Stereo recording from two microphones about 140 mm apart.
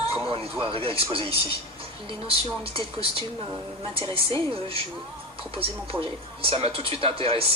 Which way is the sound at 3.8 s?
35° right (ahead or behind).